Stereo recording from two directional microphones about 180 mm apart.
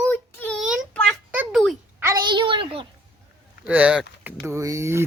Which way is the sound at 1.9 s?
15° right (ahead or behind).